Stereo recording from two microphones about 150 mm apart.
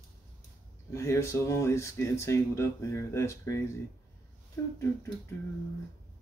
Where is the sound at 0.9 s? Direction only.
20° left (ahead or behind).